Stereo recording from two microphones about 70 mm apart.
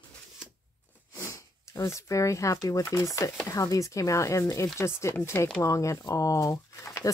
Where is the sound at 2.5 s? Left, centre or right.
Left.